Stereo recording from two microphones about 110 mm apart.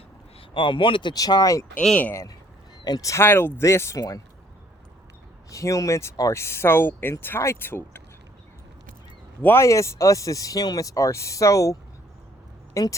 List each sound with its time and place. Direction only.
0.5 s speech: 50° left (ahead or behind)
1.1 s speech: 35° left (ahead or behind)
1.7 s speech: 10° left (ahead or behind)
2.8 s speech: 35° left (ahead or behind)
5.5 s speech: 30° left (ahead or behind)
9.4 s speech: 20° left (ahead or behind)